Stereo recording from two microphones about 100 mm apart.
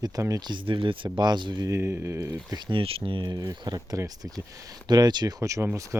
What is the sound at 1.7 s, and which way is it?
Speech, 25° right (ahead or behind).